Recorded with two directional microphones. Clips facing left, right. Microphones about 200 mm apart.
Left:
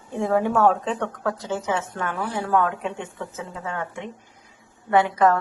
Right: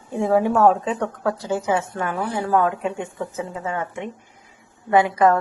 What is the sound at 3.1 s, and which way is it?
A woman's voice, 15° right (ahead or behind).